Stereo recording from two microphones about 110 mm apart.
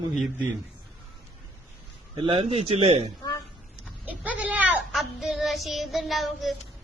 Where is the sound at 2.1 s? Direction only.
50° right (ahead or behind); by 3.1 s 75° right (ahead or behind).